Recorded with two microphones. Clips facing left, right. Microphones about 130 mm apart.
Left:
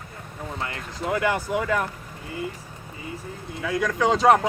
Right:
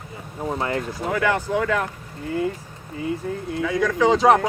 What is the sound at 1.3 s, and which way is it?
Speech, 10° left (ahead or behind).